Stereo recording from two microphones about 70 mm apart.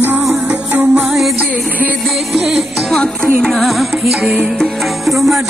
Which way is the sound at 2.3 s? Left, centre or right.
Centre.